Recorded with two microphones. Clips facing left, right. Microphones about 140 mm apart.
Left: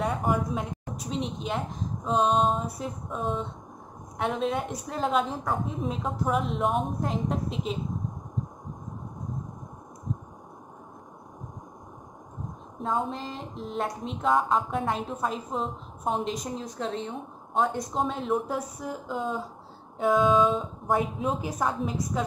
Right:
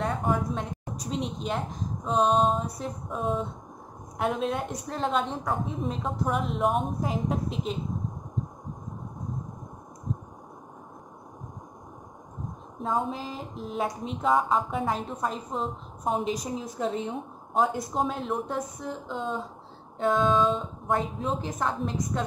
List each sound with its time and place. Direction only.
0.0 s a woman's voice: centre (ahead or behind)
12.7 s speech: centre (ahead or behind)